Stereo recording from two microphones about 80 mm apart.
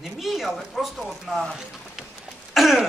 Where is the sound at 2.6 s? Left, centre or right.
Centre.